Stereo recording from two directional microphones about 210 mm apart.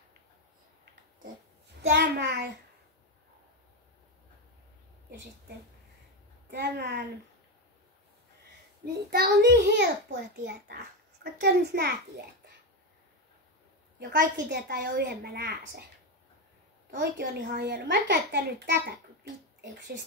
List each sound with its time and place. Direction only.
1.8 s a child's voice: 55° right (ahead or behind)
6.5 s a woman's voice: 55° right (ahead or behind)
9.1 s a child's voice: 50° right (ahead or behind)
11.4 s a child's voice: 50° right (ahead or behind)
13.9 s a child's voice: 55° right (ahead or behind)
16.9 s a child's voice: 45° right (ahead or behind)